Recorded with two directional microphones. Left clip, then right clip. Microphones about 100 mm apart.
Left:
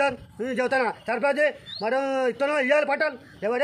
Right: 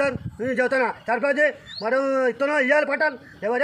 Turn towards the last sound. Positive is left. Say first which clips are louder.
# right 3 dB
turn(degrees=20)  # may be behind; listen again after turning